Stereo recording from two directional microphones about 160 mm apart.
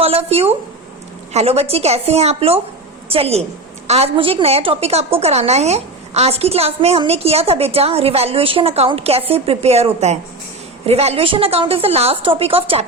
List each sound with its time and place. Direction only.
0.0 s a woman's voice: 40° right (ahead or behind)